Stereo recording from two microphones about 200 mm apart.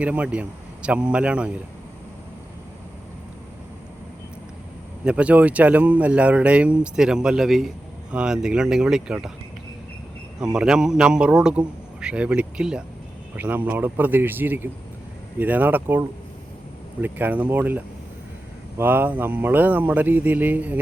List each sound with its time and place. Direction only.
0.0 s speech: 5° right (ahead or behind)
5.0 s speech: 5° right (ahead or behind)
10.4 s speech: 5° right (ahead or behind)